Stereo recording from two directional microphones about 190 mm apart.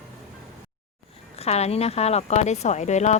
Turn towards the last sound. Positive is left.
turn(degrees=35)  # may be behind; listen again after turning